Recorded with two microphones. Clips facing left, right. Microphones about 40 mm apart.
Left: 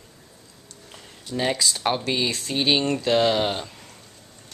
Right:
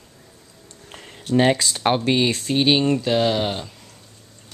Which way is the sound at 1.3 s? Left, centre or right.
Right.